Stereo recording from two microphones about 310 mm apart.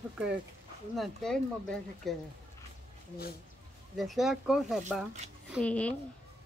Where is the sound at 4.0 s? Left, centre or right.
Centre.